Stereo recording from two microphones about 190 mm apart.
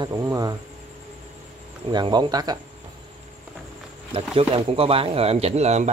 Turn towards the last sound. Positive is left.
turn(degrees=-35)  # may be behind; listen again after turning